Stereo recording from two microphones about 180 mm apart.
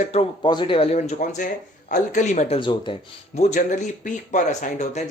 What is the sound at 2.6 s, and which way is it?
Speech, 25° left (ahead or behind).